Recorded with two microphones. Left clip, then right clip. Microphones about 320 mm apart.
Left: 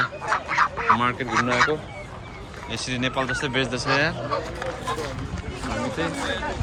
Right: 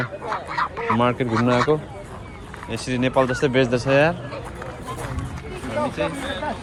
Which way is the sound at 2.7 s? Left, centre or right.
Centre.